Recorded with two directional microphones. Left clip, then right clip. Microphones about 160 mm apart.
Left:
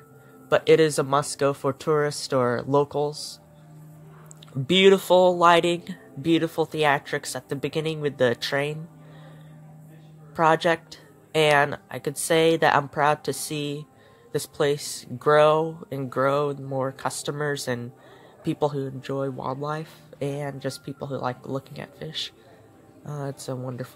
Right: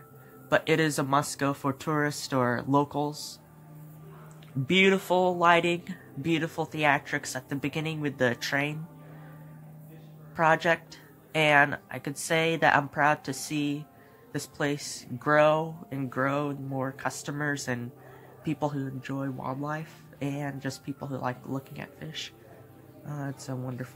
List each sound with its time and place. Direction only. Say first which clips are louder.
0.5 s speech: left 7 dB; 15° left (ahead or behind)
4.6 s speech: left 6 dB; 25° left (ahead or behind)
10.3 s speech: left 3 dB; 20° left (ahead or behind)